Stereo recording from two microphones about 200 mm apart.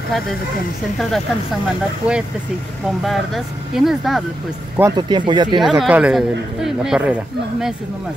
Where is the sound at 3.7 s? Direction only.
Centre (ahead or behind).